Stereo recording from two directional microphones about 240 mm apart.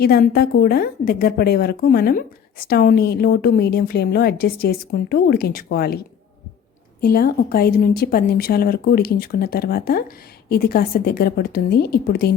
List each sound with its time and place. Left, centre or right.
0.0 s a woman's voice: left
7.0 s a woman's voice: left